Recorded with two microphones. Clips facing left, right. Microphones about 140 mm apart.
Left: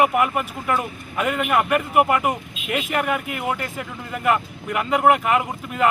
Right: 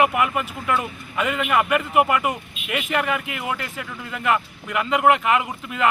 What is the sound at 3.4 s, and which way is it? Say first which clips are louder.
Speech: left 3 dB; 45° left (ahead or behind).